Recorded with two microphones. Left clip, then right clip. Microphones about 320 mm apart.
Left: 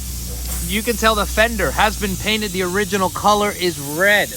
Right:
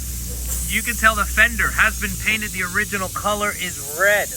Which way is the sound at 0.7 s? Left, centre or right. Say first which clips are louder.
Left 1 dB; centre.